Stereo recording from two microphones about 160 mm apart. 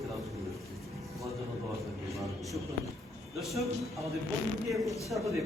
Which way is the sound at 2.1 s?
Centre (ahead or behind).